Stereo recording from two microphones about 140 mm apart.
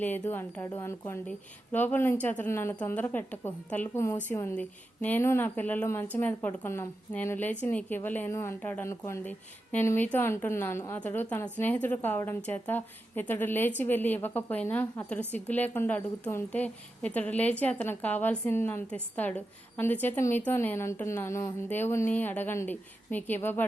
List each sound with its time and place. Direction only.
0.0 s a woman's voice: 15° left (ahead or behind)